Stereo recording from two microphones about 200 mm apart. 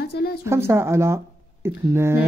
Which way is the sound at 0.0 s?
55° left (ahead or behind).